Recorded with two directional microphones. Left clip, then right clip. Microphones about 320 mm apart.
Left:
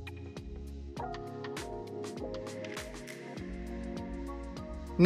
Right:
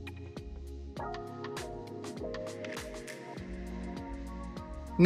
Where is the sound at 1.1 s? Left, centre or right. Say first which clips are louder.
Even; centre.